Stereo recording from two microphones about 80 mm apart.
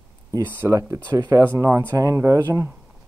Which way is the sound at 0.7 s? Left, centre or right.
Right.